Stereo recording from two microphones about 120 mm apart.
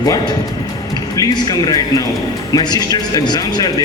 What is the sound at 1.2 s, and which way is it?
Speech, 30° left (ahead or behind).